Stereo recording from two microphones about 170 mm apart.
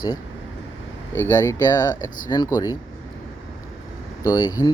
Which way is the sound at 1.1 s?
15° left (ahead or behind).